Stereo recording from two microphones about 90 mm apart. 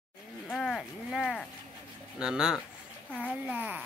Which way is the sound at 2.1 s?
10° right (ahead or behind).